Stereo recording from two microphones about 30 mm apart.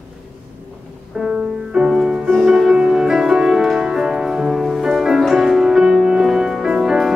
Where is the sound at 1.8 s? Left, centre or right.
Centre.